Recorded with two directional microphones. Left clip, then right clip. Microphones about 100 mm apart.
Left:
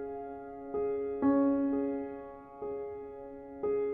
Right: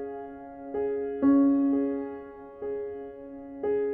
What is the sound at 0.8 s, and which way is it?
Music, 25° right (ahead or behind).